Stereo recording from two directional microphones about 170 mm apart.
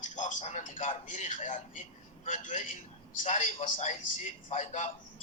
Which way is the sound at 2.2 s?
50° left (ahead or behind).